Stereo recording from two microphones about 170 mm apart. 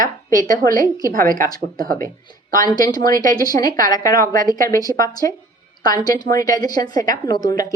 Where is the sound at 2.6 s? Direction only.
20° left (ahead or behind).